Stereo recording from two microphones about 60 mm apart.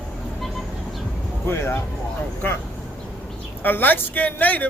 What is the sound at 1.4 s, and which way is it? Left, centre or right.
Speech, left.